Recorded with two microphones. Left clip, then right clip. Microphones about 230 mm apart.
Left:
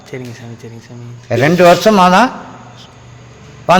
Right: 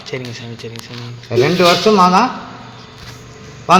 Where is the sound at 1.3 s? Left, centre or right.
Left.